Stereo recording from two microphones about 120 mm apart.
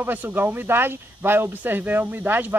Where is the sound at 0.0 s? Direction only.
15° right (ahead or behind).